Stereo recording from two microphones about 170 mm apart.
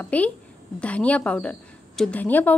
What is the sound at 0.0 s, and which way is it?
A woman's voice, 10° left (ahead or behind).